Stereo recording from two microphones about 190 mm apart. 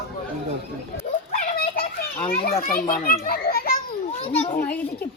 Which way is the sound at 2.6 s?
50° left (ahead or behind).